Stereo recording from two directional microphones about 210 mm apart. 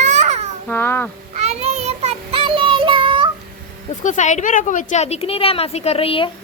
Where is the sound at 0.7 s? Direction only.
10° left (ahead or behind).